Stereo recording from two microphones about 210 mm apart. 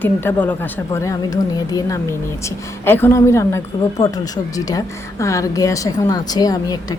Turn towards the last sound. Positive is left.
turn(degrees=15)  # may be behind; listen again after turning